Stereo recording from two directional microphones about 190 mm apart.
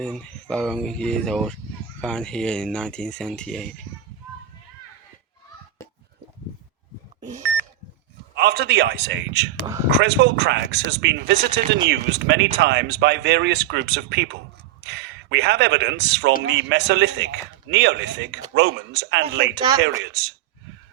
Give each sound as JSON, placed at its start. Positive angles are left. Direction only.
{"t": 0.0, "sound": "speech", "side_deg": 5}
{"t": 8.4, "sound": "a man's voice", "side_deg": -60}
{"t": 19.5, "sound": "speech", "side_deg": -20}